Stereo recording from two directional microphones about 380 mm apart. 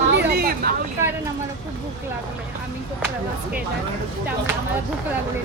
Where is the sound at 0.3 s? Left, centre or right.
Right.